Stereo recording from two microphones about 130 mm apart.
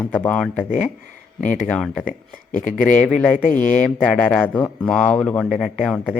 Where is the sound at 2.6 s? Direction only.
80° left.